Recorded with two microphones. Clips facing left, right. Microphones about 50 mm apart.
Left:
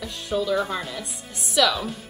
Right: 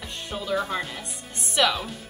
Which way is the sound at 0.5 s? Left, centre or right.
Centre.